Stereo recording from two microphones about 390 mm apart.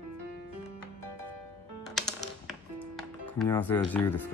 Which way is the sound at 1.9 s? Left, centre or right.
Centre.